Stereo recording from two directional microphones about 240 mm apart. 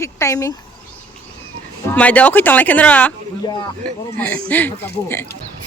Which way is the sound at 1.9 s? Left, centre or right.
Centre.